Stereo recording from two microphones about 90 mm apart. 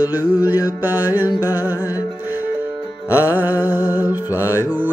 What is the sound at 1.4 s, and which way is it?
Music, 20° right (ahead or behind).